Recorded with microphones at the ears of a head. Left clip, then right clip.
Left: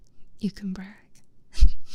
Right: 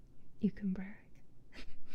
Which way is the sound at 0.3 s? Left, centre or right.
Left.